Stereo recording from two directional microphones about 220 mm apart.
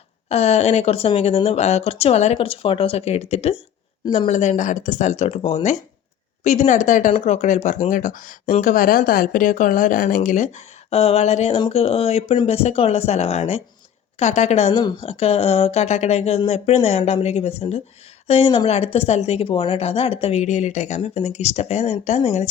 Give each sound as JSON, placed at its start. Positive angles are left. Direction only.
{"t": 0.3, "sound": "speech", "side_deg": 30}